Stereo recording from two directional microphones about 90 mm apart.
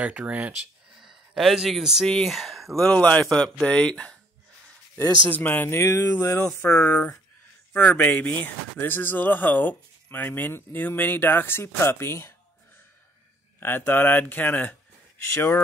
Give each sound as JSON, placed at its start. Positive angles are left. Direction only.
{"t": 0.0, "sound": "speech", "side_deg": -15}
{"t": 0.9, "sound": "a sound", "side_deg": -5}
{"t": 2.0, "sound": "speech", "side_deg": 5}
{"t": 2.9, "sound": "a man's voice", "side_deg": 15}
{"t": 5.3, "sound": "speech", "side_deg": 20}
{"t": 6.7, "sound": "a man's voice", "side_deg": 15}
{"t": 13.6, "sound": "speech", "side_deg": 25}